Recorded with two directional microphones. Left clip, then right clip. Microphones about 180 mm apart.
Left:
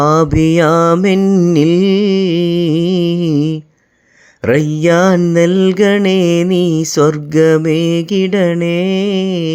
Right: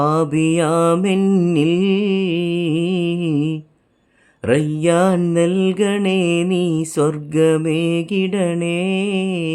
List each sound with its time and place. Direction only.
0.0 s music: 25° left (ahead or behind)
1.5 s music: 25° left (ahead or behind)